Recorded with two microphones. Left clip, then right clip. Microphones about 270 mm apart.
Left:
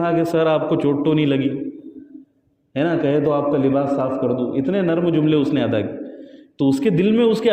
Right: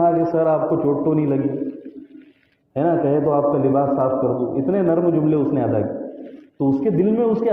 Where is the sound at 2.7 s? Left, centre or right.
Left.